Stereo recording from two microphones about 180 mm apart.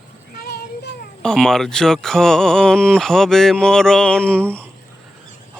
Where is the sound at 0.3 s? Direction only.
60° left (ahead or behind).